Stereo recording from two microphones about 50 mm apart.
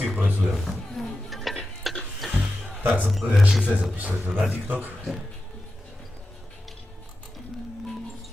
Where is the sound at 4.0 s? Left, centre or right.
Right.